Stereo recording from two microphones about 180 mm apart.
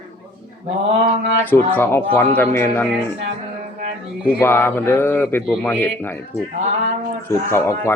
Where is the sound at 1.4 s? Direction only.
10° left (ahead or behind).